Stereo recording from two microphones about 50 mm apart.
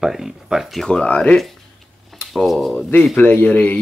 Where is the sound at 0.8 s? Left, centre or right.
Left.